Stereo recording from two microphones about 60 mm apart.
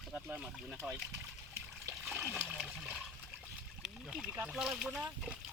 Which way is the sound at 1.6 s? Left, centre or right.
Right.